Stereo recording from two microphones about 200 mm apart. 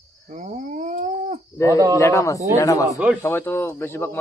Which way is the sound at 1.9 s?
15° left (ahead or behind).